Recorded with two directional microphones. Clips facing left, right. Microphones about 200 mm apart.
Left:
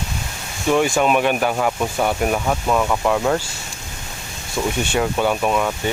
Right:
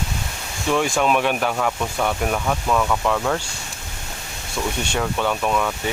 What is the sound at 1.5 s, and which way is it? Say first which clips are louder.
Speech: left 3 dB; 15° left (ahead or behind).